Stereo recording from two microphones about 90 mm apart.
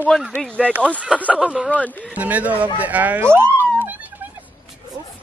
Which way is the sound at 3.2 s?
25° right (ahead or behind).